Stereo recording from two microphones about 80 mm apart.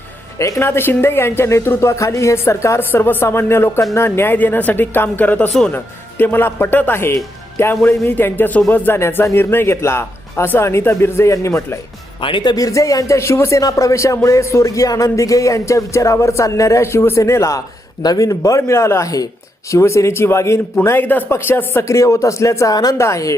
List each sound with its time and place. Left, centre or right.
0.3 s music: left
3.9 s speech: left
9.0 s music: left
12.2 s speech: left
12.5 s music: left
13.6 s music: left
18.0 s a man's voice: left
19.7 s music: left
20.8 s speech: left
21.8 s music: left
23.0 s music: left